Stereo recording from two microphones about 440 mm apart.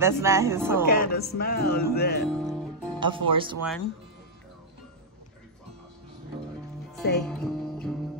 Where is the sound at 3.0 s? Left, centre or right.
Centre.